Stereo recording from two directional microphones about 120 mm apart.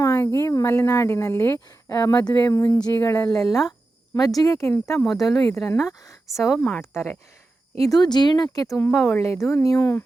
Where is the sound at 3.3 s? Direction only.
30° left (ahead or behind).